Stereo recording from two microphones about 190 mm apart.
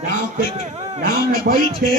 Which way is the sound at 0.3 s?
40° right (ahead or behind).